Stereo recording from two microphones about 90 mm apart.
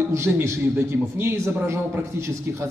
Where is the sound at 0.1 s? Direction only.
30° right (ahead or behind).